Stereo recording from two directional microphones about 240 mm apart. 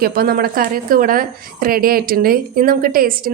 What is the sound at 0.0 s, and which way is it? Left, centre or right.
A woman's voice, right.